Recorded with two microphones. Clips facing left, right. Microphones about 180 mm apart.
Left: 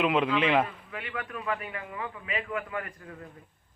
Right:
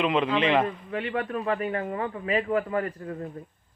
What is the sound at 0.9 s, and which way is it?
A man's voice, 35° right (ahead or behind).